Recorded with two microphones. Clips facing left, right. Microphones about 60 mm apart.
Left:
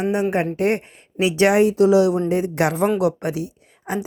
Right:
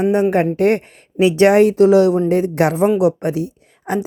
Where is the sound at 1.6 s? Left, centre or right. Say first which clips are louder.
Right 4 dB; right.